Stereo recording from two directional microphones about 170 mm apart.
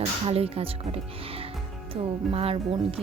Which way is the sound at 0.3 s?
35° right (ahead or behind).